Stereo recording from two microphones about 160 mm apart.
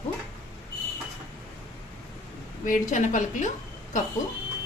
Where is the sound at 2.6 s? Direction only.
50° left (ahead or behind).